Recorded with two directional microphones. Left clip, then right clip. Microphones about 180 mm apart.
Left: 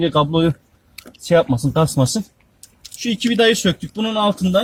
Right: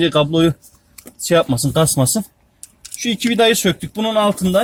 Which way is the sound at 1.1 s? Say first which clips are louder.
Even; 15° left (ahead or behind).